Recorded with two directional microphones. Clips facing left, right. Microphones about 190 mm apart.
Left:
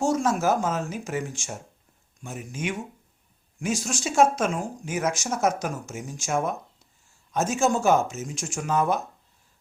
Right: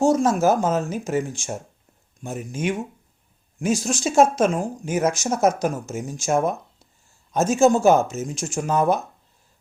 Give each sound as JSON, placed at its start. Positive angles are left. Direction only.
{"t": 0.0, "sound": "speech", "side_deg": -35}
{"t": 3.8, "sound": "speech", "side_deg": -40}